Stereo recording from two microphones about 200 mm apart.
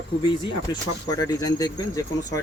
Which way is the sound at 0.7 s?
20° left (ahead or behind).